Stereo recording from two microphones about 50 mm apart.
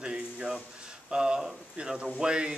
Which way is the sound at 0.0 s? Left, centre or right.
Centre.